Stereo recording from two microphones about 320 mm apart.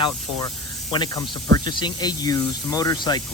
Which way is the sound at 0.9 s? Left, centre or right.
Centre.